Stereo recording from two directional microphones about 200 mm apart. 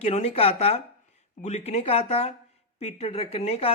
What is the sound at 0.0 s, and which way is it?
A woman's voice, 30° left (ahead or behind).